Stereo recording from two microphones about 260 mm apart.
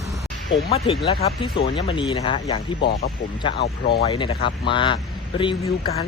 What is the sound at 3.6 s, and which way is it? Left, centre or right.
Speech, left.